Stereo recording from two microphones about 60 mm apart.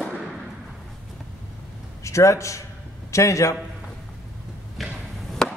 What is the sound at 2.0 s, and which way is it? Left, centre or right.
A man's voice, left.